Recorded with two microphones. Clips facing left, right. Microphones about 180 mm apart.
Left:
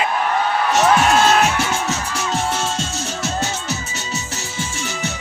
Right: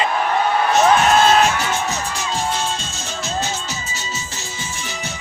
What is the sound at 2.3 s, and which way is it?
Music, 70° left (ahead or behind).